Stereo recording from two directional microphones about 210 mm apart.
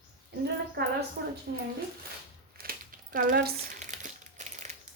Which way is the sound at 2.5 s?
45° right (ahead or behind).